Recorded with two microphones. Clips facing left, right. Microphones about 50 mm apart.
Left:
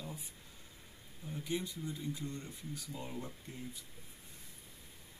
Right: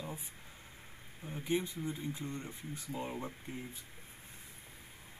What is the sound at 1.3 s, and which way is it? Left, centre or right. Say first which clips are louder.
Speech: right 4 dB; right.